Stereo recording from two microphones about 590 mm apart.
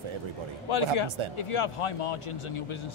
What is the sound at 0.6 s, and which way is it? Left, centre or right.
A man's voice, left.